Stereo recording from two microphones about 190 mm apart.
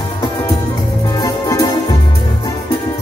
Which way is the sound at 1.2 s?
20° left (ahead or behind).